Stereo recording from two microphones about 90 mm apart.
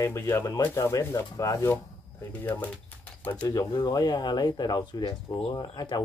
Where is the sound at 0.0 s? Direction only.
30° left (ahead or behind).